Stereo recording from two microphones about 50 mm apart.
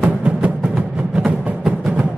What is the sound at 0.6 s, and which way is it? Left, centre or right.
Music, centre.